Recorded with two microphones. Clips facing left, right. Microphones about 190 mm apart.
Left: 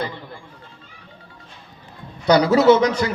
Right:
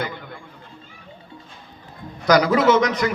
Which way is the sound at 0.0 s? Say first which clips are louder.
Left 1 dB; 30° left (ahead or behind).